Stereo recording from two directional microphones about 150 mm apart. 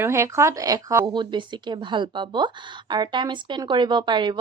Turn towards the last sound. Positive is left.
turn(degrees=-30)  # may be behind; listen again after turning